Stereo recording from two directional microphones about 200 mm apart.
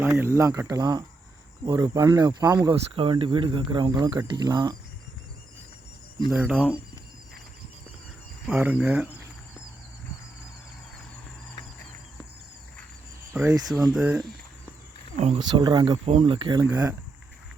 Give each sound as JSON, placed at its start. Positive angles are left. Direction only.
{"t": 0.0, "sound": "speech", "side_deg": -15}
{"t": 6.3, "sound": "speech", "side_deg": -5}
{"t": 8.4, "sound": "speech", "side_deg": -10}
{"t": 13.3, "sound": "speech", "side_deg": -15}
{"t": 15.1, "sound": "speech", "side_deg": -30}